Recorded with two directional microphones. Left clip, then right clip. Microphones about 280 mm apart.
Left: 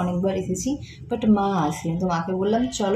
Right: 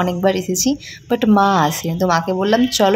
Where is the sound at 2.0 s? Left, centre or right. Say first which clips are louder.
Right 8 dB; right.